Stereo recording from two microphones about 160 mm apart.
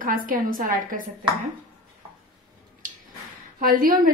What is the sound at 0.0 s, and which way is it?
A woman's voice, 60° right (ahead or behind).